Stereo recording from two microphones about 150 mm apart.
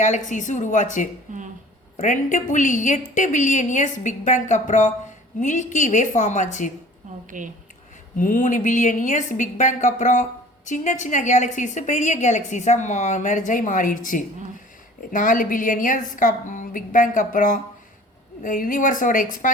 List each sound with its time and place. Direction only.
0.0 s a woman's voice: 55° left (ahead or behind)
1.3 s a sound: 60° right (ahead or behind)
2.0 s a woman's voice: 55° left (ahead or behind)
7.3 s speech: 60° right (ahead or behind)
8.2 s a woman's voice: 60° left (ahead or behind)